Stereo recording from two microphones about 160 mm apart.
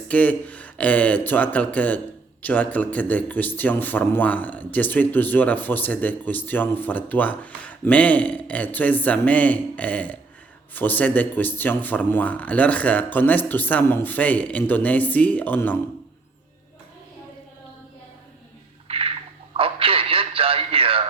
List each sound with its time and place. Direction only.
0.1 s speech: 10° left (ahead or behind)
18.9 s a sound: 35° right (ahead or behind)
19.5 s radio: 35° right (ahead or behind)